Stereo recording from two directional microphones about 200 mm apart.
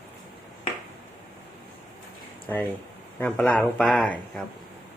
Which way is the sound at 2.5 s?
10° left (ahead or behind).